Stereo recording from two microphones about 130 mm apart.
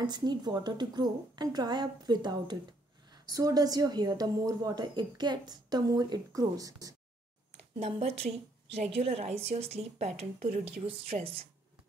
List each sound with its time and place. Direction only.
0.0 s a woman's voice: 35° right (ahead or behind)
8.2 s a woman's voice: 55° right (ahead or behind)